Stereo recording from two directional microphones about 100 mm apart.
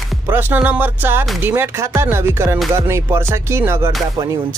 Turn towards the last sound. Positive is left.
turn(degrees=-25)  # may be behind; listen again after turning